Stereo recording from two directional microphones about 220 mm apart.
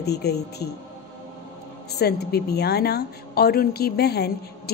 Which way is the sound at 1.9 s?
45° left (ahead or behind).